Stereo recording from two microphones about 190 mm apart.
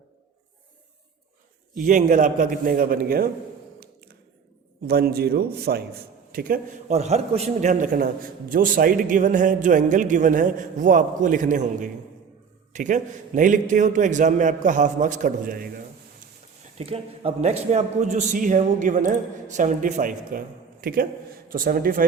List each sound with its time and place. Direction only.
1.7 s a man's voice: 45° right (ahead or behind)
3.8 s a sound: 55° right (ahead or behind)
4.9 s a man's voice: 55° right (ahead or behind)
16.7 s a man's voice: 30° right (ahead or behind); by 22.0 s 50° right (ahead or behind)